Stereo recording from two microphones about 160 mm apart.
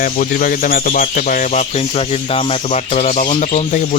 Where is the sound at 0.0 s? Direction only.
60° left (ahead or behind).